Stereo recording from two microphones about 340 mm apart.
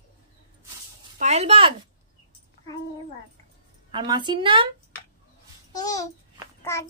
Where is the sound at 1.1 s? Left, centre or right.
Centre.